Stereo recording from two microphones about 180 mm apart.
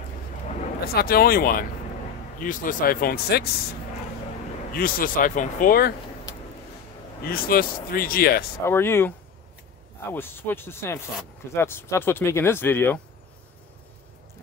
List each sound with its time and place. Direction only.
0.9 s speech: 55° left (ahead or behind)
4.7 s speech: 50° left (ahead or behind)
7.2 s speech: 55° left (ahead or behind)
8.6 s speech: 15° left (ahead or behind)
10.1 s speech: 10° left (ahead or behind)